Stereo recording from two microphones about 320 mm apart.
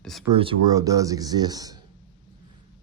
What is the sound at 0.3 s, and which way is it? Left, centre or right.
Speech, centre.